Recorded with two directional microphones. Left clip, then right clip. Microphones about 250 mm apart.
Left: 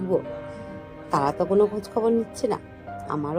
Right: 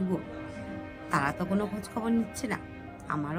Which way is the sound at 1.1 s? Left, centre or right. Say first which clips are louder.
Left 9 dB; centre.